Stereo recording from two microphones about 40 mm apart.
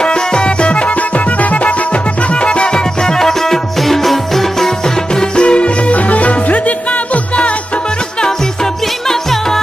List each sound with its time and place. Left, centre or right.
0.0 s music: left
2.2 s music: left
9.0 s music: centre